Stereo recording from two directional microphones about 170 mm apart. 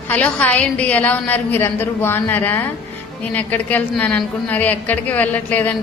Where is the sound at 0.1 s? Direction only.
5° left (ahead or behind).